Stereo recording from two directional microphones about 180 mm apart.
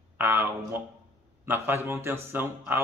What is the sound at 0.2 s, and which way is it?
Speech, 10° right (ahead or behind).